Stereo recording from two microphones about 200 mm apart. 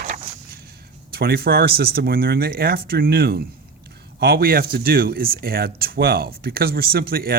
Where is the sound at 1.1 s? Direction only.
50° right (ahead or behind).